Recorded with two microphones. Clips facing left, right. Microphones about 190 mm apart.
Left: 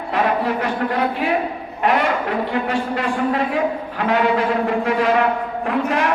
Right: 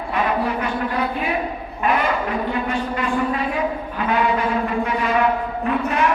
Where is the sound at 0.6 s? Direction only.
75° left (ahead or behind).